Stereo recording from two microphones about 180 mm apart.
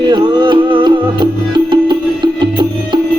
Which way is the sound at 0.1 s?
25° right (ahead or behind).